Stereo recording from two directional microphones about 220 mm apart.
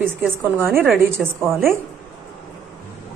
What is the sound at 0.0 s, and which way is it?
A woman's voice, 10° right (ahead or behind).